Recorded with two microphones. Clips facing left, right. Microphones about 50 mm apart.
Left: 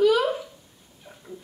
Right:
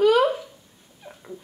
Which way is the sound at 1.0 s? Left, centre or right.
Centre.